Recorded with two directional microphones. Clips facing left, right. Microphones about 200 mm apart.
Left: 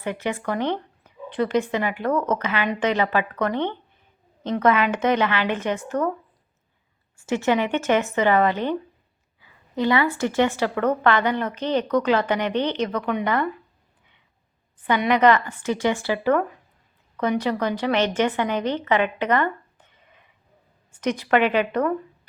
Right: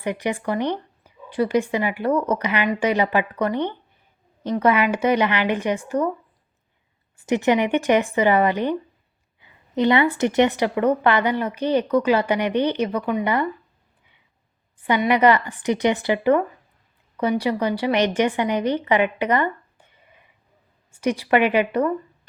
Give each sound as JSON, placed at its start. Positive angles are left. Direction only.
{"t": 0.0, "sound": "a woman's voice", "side_deg": -15}
{"t": 7.2, "sound": "a woman's voice", "side_deg": -15}
{"t": 15.0, "sound": "a woman's voice", "side_deg": -10}